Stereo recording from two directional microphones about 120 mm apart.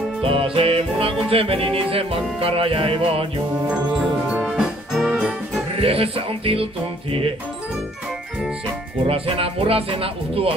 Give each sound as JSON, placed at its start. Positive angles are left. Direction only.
{"t": 0.2, "sound": "music", "side_deg": -50}
{"t": 4.3, "sound": "music", "side_deg": -5}
{"t": 5.8, "sound": "music", "side_deg": -50}
{"t": 9.0, "sound": "music", "side_deg": -50}